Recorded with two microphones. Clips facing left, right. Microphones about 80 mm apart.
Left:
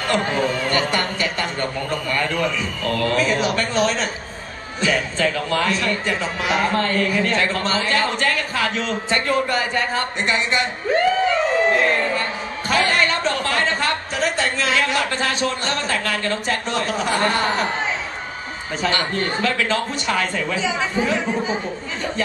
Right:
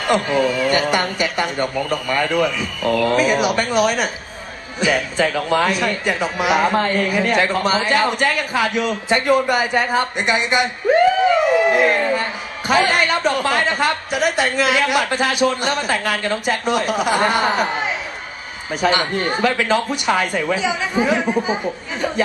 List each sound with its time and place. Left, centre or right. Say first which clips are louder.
0.7 s a man's voice: right 3 dB; centre